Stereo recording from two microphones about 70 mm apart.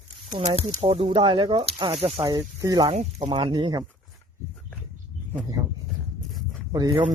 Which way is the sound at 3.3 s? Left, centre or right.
Right.